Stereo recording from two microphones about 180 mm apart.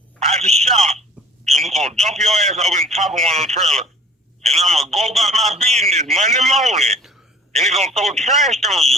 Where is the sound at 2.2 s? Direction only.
40° right (ahead or behind).